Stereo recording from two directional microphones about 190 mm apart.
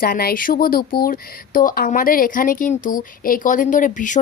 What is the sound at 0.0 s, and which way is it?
Speech, 50° left (ahead or behind).